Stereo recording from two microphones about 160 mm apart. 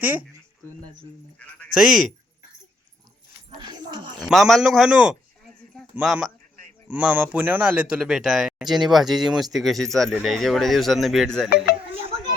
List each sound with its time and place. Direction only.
0.0 s speech: 10° right (ahead or behind)
1.7 s speech: 5° right (ahead or behind)
3.6 s speech: 30° right (ahead or behind)
4.2 s speech: centre (ahead or behind)
5.7 s a sound: 5° right (ahead or behind)
6.8 s speech: 10° right (ahead or behind)
11.4 s speech: 75° left (ahead or behind)